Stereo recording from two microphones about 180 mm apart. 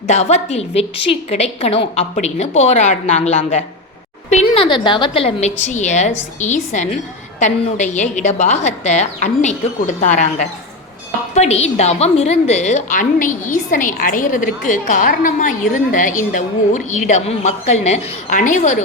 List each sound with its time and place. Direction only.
0.1 s a woman's voice: 40° left (ahead or behind)